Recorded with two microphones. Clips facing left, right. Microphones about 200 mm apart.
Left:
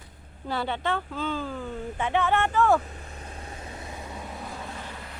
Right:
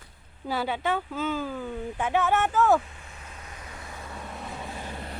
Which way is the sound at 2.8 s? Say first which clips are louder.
Left 5 dB; 40° left (ahead or behind).